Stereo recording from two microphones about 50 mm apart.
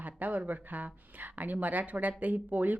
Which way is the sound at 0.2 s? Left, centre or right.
Right.